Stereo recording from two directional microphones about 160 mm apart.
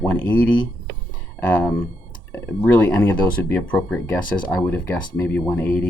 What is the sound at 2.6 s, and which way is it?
Speech, 10° left (ahead or behind).